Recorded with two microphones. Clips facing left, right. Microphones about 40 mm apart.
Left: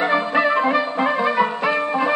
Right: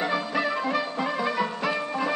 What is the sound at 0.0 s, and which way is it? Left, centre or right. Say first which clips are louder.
Music: left 8 dB; left.